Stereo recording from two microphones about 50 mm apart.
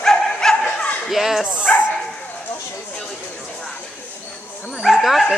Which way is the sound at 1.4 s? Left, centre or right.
Left.